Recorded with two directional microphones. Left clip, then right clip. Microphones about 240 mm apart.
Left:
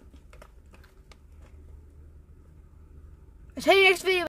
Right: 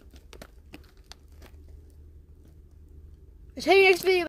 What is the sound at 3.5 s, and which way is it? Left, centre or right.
Speech, centre.